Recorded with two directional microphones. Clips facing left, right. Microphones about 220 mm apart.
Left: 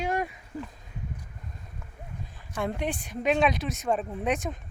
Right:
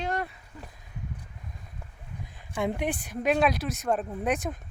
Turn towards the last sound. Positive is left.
turn(degrees=0)  # may be behind; listen again after turning